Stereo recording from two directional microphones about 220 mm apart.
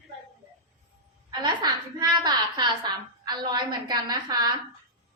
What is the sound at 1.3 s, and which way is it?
A woman's voice, 20° right (ahead or behind).